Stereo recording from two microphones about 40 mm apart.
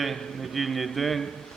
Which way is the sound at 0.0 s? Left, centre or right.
Centre.